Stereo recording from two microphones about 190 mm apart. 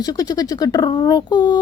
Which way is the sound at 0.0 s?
20° left (ahead or behind).